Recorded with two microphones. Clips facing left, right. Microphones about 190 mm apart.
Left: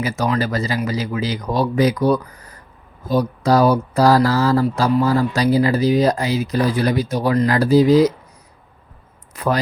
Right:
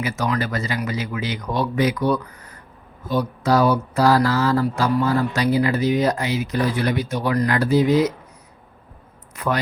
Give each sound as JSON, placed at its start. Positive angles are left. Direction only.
{"t": 0.0, "sound": "speech", "side_deg": 35}
{"t": 9.3, "sound": "speech", "side_deg": 35}